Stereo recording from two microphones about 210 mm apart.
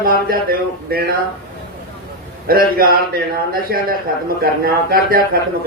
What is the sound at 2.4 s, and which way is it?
A man's voice, 45° right (ahead or behind).